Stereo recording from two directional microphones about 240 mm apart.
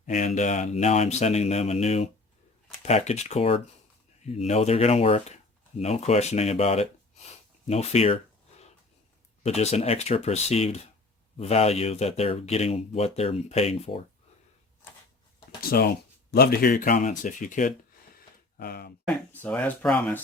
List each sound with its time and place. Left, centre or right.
0.0 s speech: left
9.4 s speech: left
15.6 s speech: left
19.0 s speech: centre